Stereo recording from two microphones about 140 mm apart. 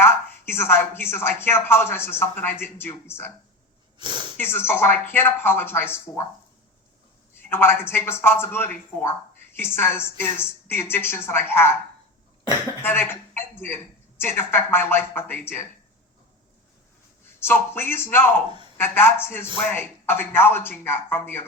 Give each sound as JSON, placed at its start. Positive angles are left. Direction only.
{"t": 0.0, "sound": "speech", "side_deg": 15}
{"t": 3.9, "sound": "speech", "side_deg": -35}
{"t": 4.4, "sound": "speech", "side_deg": 15}
{"t": 7.5, "sound": "speech", "side_deg": 15}
{"t": 12.8, "sound": "speech", "side_deg": 15}
{"t": 17.2, "sound": "speech", "side_deg": 15}